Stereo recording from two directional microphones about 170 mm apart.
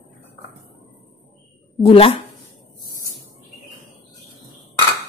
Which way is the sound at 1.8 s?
35° left (ahead or behind).